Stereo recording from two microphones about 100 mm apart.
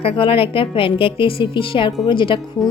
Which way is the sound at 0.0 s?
65° left (ahead or behind).